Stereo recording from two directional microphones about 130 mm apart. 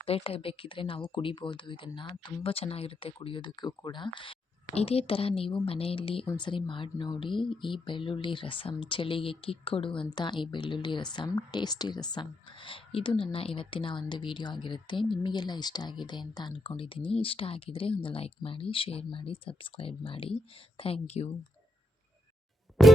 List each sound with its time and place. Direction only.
0.0 s speech: 45° left (ahead or behind)
4.6 s a woman's voice: 50° left (ahead or behind)
22.8 s music: centre (ahead or behind)